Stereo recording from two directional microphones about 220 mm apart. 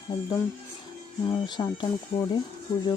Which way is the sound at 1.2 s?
20° left (ahead or behind).